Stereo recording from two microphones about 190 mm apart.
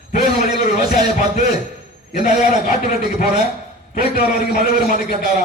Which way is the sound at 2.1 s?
40° left (ahead or behind).